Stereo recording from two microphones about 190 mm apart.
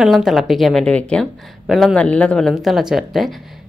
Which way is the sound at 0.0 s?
Centre (ahead or behind).